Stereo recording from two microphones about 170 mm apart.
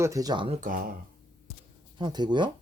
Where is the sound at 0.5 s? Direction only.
50° right (ahead or behind).